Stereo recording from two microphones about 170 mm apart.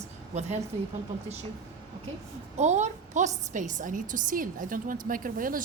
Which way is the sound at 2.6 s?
45° right (ahead or behind).